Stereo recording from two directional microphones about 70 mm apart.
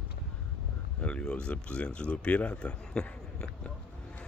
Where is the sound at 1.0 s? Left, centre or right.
Centre.